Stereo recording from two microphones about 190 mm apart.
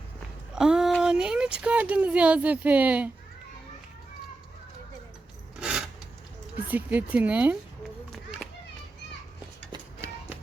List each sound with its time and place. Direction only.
0.5 s speech: 5° right (ahead or behind)
5.5 s a sound: 5° right (ahead or behind)
6.7 s speech: 10° right (ahead or behind)
9.7 s music: 15° right (ahead or behind)